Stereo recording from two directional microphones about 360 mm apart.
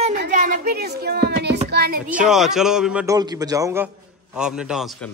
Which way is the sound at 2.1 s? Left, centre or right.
Centre.